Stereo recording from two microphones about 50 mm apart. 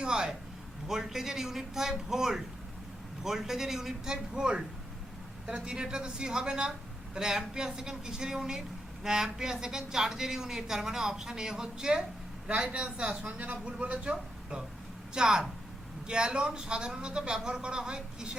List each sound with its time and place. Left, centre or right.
0.0 s a sound: centre
0.9 s a woman's voice: centre; by 14.6 s right
15.1 s a woman's voice: centre